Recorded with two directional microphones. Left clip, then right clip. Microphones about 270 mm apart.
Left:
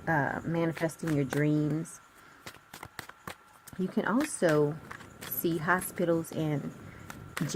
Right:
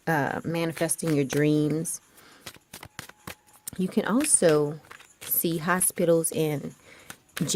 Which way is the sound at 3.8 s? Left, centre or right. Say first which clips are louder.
Right 4 dB; right.